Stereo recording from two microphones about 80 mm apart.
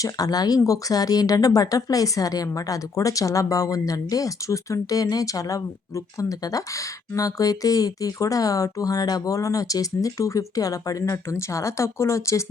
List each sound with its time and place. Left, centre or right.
0.0 s speech: left